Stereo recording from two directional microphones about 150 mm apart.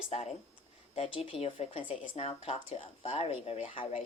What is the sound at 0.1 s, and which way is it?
Speech, 45° left (ahead or behind).